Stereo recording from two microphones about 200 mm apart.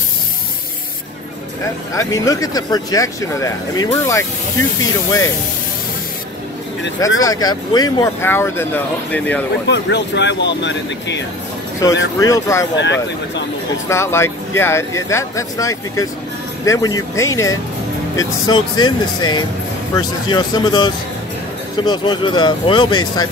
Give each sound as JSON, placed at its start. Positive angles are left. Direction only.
{"t": 2.0, "sound": "speech", "side_deg": 15}
{"t": 7.2, "sound": "speech", "side_deg": 20}
{"t": 9.7, "sound": "speech", "side_deg": 60}
{"t": 11.8, "sound": "speech", "side_deg": 15}
{"t": 12.7, "sound": "speech", "side_deg": 60}
{"t": 13.8, "sound": "speech", "side_deg": 15}